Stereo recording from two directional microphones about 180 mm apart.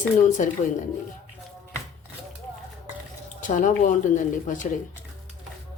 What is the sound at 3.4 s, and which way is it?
Speech, 45° left (ahead or behind).